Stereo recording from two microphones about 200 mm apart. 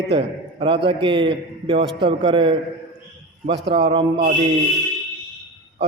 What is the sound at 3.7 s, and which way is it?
Speech, 60° right (ahead or behind).